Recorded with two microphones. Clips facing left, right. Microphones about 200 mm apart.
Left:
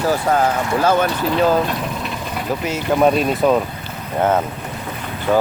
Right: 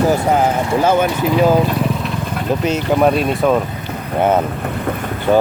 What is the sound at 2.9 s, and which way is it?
Speech, centre (ahead or behind).